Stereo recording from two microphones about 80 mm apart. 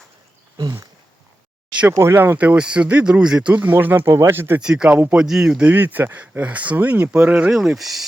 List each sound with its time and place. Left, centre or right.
0.5 s a sound: right
1.9 s speech: right
2.4 s speech: centre
3.5 s speech: right
4.6 s speech: centre
7.5 s speech: centre